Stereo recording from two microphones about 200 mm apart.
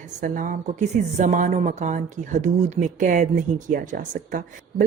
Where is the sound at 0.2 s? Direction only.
40° right (ahead or behind).